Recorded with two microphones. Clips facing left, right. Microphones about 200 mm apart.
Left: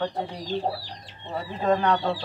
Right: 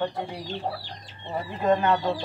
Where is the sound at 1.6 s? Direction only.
5° right (ahead or behind).